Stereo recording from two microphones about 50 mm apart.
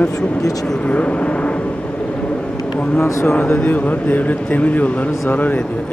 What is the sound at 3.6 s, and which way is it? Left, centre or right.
A man's voice, left.